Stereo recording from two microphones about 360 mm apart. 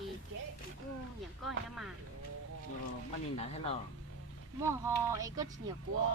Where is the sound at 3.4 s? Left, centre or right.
Centre.